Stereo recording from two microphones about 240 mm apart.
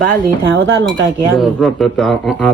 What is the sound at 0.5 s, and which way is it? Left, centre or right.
Speech, right.